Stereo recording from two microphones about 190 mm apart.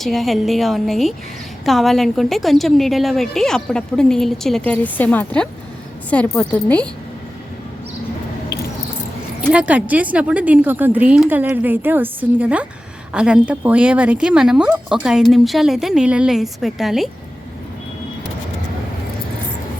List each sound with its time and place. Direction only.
0.0 s a woman's voice: centre (ahead or behind)
9.5 s speech: 5° right (ahead or behind)